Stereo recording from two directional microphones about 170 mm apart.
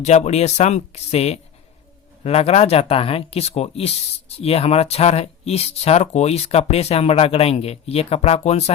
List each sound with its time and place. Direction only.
0.0 s speech: 40° left (ahead or behind)